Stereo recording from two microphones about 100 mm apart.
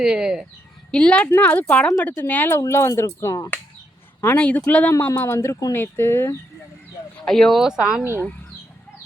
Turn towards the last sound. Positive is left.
turn(degrees=-5)  # may be behind; listen again after turning